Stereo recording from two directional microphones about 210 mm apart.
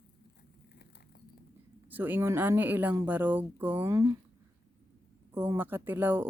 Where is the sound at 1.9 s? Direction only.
10° right (ahead or behind).